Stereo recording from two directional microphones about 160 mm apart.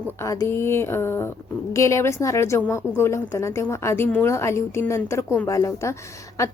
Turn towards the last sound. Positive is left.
turn(degrees=20)  # may be behind; listen again after turning